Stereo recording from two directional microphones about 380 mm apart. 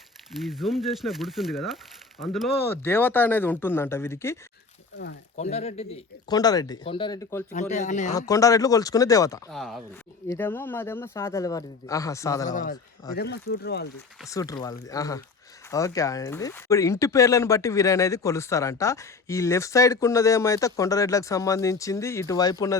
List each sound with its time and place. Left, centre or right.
0.4 s speech: centre
4.9 s speech: left
5.5 s speech: centre
7.5 s speech: centre
12.5 s speech: left
14.2 s speech: centre